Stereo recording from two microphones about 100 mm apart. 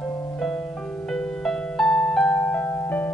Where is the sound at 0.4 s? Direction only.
5° left (ahead or behind).